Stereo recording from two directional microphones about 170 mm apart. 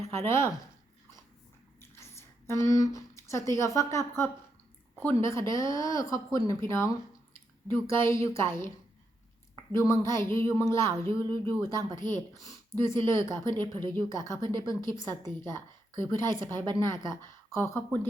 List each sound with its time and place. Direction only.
0.1 s speech: 15° left (ahead or behind)
1.8 s speech: 15° left (ahead or behind)
9.7 s speech: 20° left (ahead or behind)
10.9 s speech: 35° right (ahead or behind)
11.2 s a woman's voice: 15° left (ahead or behind)